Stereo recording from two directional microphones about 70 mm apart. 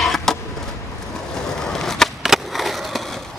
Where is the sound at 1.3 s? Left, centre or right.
Centre.